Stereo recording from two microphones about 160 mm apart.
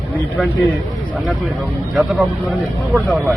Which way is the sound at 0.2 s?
10° left (ahead or behind).